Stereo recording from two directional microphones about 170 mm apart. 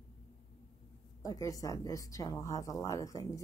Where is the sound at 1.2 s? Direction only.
20° left (ahead or behind).